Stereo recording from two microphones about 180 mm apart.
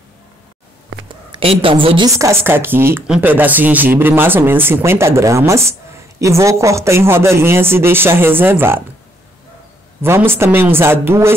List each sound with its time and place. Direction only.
1.0 s a sound: 30° right (ahead or behind)
2.1 s speech: 15° right (ahead or behind)
10.0 s speech: 15° right (ahead or behind)